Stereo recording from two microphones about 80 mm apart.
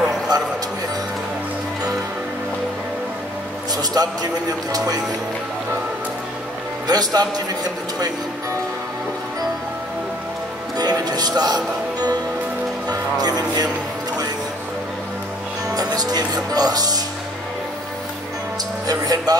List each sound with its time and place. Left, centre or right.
0.3 s speech: right
3.7 s speech: right
6.9 s a man's voice: right
10.8 s speech: right
15.7 s speech: right
18.9 s speech: right